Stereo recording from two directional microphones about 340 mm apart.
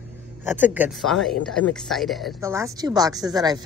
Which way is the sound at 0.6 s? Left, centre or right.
Centre.